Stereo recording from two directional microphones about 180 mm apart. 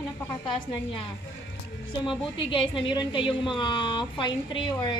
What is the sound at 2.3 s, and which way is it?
A woman's voice, 30° left (ahead or behind).